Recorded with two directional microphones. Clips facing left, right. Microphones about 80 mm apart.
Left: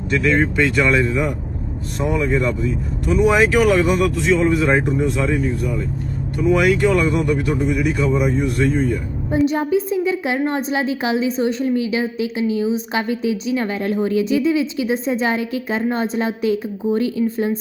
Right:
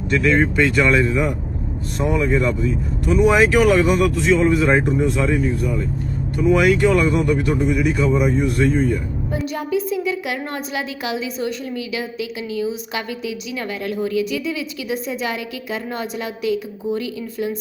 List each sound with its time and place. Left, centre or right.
0.1 s speech: centre
9.3 s a woman's voice: left